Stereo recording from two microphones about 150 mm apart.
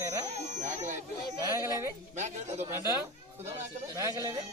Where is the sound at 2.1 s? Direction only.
50° right (ahead or behind).